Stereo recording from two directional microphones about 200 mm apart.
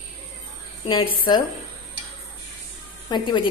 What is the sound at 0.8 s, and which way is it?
Speech, 20° left (ahead or behind).